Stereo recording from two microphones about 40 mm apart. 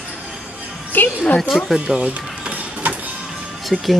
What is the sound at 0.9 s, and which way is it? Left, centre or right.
Music, left.